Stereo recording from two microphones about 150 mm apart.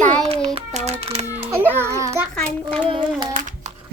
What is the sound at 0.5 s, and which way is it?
Speech, 45° right (ahead or behind).